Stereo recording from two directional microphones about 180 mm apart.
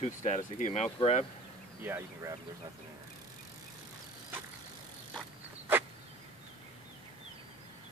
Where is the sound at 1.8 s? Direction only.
15° right (ahead or behind).